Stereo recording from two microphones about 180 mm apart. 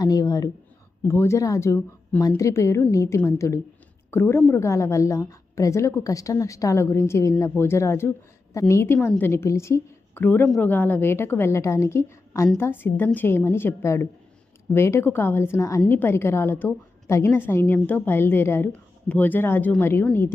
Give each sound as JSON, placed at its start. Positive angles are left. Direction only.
{"t": 0.0, "sound": "a woman's voice", "side_deg": 20}